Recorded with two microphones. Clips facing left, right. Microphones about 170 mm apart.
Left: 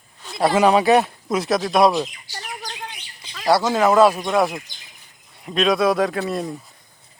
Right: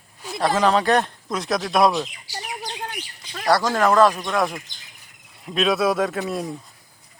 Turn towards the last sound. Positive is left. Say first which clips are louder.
# left 2 dB
turn(degrees=0)  # may be behind; listen again after turning